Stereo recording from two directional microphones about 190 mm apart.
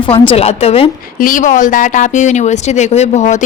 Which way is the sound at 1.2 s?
45° left (ahead or behind).